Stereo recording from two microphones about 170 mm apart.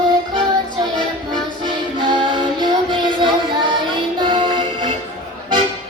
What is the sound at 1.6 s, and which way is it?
Music, 30° right (ahead or behind).